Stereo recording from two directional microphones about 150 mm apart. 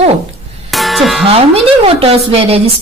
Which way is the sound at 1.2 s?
40° right (ahead or behind).